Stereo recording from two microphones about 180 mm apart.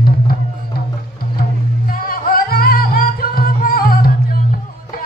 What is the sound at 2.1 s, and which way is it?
Music, 55° left (ahead or behind).